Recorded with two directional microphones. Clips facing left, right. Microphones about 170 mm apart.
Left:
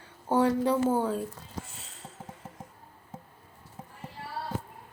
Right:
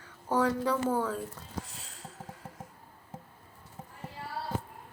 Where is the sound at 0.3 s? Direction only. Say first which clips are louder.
Left 4 dB; 25° left (ahead or behind).